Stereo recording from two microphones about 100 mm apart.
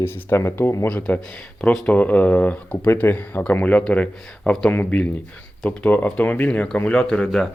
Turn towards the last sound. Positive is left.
turn(degrees=5)  # may be behind; listen again after turning